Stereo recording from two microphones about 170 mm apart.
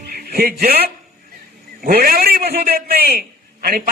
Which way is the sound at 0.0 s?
65° right (ahead or behind).